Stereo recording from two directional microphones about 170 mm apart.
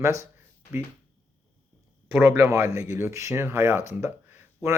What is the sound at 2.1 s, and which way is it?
Speech, 10° right (ahead or behind).